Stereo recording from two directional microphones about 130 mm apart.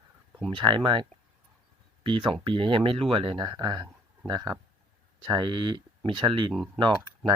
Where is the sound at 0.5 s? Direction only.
35° right (ahead or behind).